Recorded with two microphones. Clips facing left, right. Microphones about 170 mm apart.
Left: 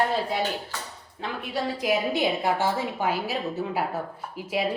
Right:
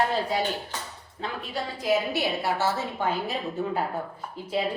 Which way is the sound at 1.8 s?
15° left (ahead or behind).